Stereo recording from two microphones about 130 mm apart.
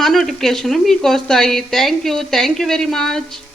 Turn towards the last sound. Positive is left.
turn(degrees=0)  # may be behind; listen again after turning